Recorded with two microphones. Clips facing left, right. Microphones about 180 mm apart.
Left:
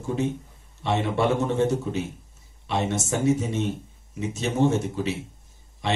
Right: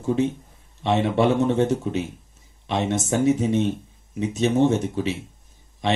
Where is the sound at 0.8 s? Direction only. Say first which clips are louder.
Right 4 dB; 20° right (ahead or behind).